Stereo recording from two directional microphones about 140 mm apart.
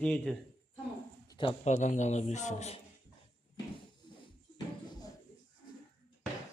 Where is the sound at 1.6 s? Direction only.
60° left (ahead or behind).